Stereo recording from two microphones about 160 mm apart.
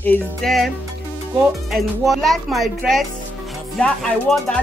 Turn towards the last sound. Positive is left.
turn(degrees=5)  # may be behind; listen again after turning